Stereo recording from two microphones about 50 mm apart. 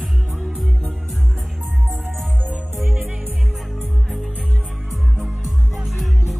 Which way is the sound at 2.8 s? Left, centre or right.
Centre.